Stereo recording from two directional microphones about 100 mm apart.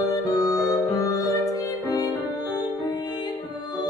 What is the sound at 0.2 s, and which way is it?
Music, 40° left (ahead or behind).